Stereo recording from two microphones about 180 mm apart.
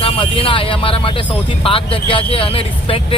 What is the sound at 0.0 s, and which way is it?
Speech, 30° left (ahead or behind).